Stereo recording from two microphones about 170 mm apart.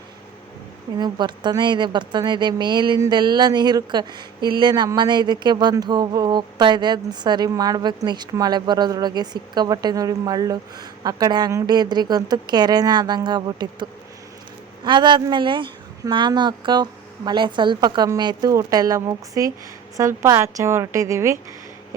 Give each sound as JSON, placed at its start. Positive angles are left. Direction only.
{"t": 0.9, "sound": "a woman's voice", "side_deg": -25}
{"t": 14.8, "sound": "a woman's voice", "side_deg": -25}